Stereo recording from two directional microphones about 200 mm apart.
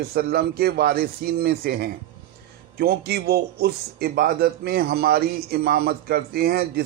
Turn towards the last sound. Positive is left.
turn(degrees=-50)  # may be behind; listen again after turning